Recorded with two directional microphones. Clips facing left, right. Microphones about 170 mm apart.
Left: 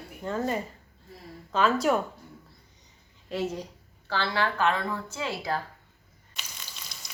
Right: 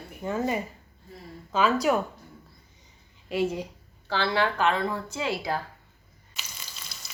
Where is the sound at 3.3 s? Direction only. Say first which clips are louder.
Right 4 dB; 10° right (ahead or behind).